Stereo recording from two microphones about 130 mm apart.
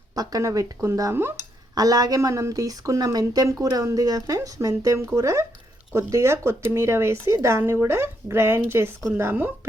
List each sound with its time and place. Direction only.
0.2 s speech: 30° right (ahead or behind)